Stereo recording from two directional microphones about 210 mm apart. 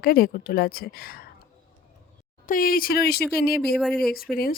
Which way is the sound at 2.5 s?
45° left (ahead or behind).